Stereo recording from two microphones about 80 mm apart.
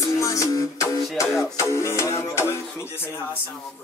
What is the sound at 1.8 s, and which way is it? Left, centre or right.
Speech, left.